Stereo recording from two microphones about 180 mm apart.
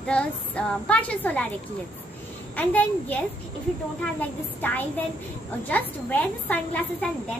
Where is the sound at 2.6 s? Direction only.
10° left (ahead or behind).